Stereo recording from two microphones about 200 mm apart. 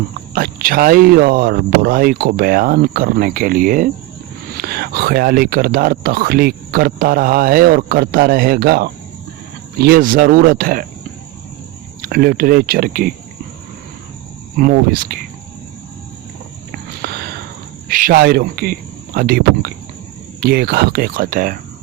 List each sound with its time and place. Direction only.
0.3 s speech: 45° right (ahead or behind)
12.0 s speech: 50° right (ahead or behind)
14.5 s speech: 45° right (ahead or behind)
17.0 s a sound: 50° right (ahead or behind)
17.8 s speech: 45° right (ahead or behind)